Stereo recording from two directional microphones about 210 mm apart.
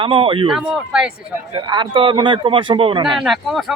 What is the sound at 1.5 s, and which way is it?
Speech, 20° right (ahead or behind).